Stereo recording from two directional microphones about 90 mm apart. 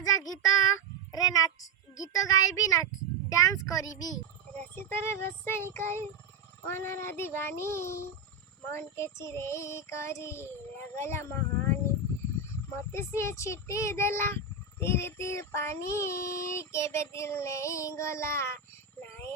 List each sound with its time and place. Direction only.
0.0 s a child's voice: 45° left (ahead or behind)
4.5 s child singing: 25° left (ahead or behind)
8.7 s speech: 30° left (ahead or behind)